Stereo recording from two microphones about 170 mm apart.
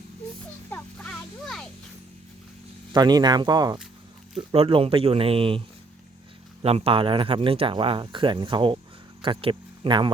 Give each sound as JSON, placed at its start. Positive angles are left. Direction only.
{"t": 0.7, "sound": "music", "side_deg": 5}
{"t": 2.9, "sound": "speech", "side_deg": -25}